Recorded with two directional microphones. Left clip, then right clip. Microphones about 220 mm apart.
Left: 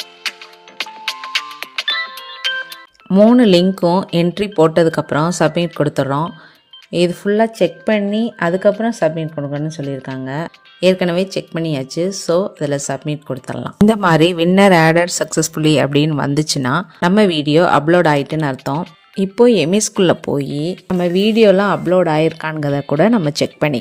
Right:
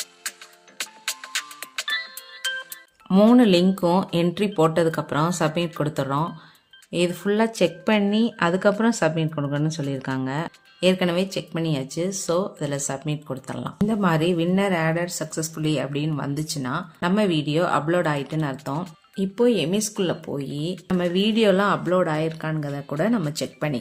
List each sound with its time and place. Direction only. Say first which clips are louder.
0.0 s music: left 10 dB; centre (ahead or behind)
3.1 s speech: left 7 dB; 15° left (ahead or behind)
13.8 s speech: left 10 dB; 40° left (ahead or behind)